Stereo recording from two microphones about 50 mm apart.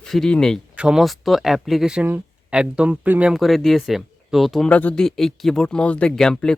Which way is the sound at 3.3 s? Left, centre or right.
Centre.